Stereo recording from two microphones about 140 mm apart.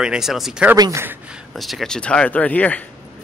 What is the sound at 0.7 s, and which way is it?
Speech, 25° right (ahead or behind).